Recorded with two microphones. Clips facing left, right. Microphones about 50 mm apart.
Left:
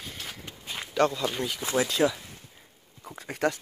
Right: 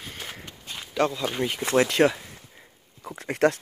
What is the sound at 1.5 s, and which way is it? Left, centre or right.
Speech, right.